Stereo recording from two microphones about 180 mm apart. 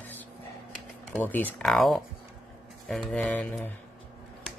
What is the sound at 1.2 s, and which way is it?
Speech, 10° left (ahead or behind).